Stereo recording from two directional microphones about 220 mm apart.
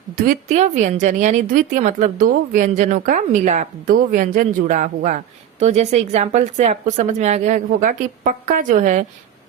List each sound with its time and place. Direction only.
0.2 s speech: 35° right (ahead or behind)